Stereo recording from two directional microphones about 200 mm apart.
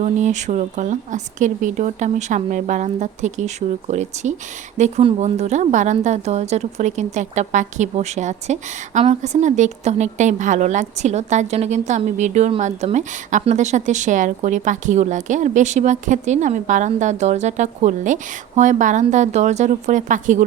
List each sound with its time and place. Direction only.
0.0 s a woman's voice: 35° right (ahead or behind)